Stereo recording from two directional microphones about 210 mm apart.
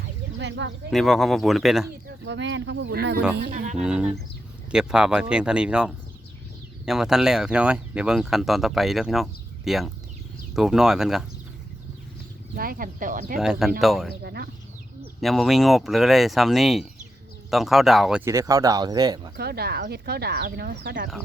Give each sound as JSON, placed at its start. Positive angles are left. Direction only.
{"t": 0.3, "sound": "speech", "side_deg": -60}
{"t": 0.9, "sound": "speech", "side_deg": 0}
{"t": 2.2, "sound": "speech", "side_deg": -60}
{"t": 3.3, "sound": "speech", "side_deg": -40}
{"t": 3.8, "sound": "speech", "side_deg": -5}
{"t": 12.5, "sound": "speech", "side_deg": -45}
{"t": 13.4, "sound": "speech", "side_deg": 0}
{"t": 14.2, "sound": "speech", "side_deg": -50}
{"t": 15.2, "sound": "speech", "side_deg": 0}
{"t": 18.3, "sound": "speech", "side_deg": -15}
{"t": 19.4, "sound": "speech", "side_deg": -50}